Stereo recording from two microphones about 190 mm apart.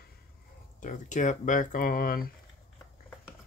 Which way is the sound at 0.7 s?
40° left (ahead or behind).